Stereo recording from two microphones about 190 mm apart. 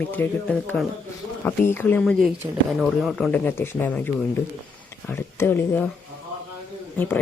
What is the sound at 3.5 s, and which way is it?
Speech, 10° left (ahead or behind).